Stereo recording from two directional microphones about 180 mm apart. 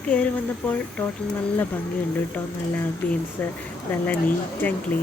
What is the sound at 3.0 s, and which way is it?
Speech, 10° left (ahead or behind).